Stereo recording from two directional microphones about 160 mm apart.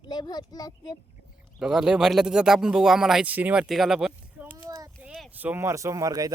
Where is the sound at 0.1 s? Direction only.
25° left (ahead or behind).